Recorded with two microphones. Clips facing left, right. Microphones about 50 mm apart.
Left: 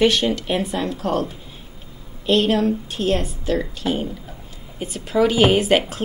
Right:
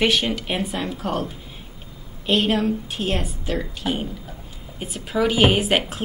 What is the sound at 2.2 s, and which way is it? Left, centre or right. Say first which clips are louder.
A woman's voice: left 3 dB; right.